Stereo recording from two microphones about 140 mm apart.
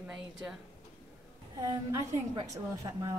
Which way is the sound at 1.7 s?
25° right (ahead or behind).